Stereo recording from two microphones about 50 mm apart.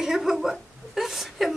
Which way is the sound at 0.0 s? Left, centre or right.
Centre.